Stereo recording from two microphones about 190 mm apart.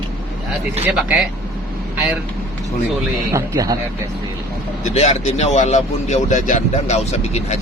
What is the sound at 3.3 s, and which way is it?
Speech, 20° right (ahead or behind).